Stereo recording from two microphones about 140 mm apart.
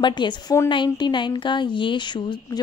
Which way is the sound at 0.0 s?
35° left (ahead or behind).